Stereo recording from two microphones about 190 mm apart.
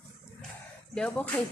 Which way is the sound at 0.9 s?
5° left (ahead or behind).